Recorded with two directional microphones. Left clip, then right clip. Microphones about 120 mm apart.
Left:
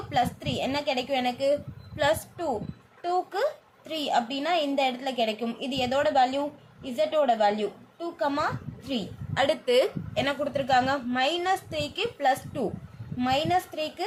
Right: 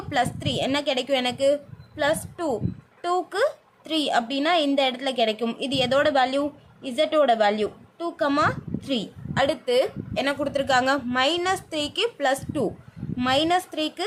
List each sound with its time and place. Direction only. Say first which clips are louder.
0.1 s a woman's voice: right 2 dB; 50° right (ahead or behind)
3.0 s a woman's voice: right 3 dB; 55° right (ahead or behind)
9.3 s a woman's voice: right 2 dB; 30° right (ahead or behind)
9.6 s a woman's voice: left 1 dB; 15° right (ahead or behind)
10.4 s a woman's voice: right 3 dB; 45° right (ahead or behind)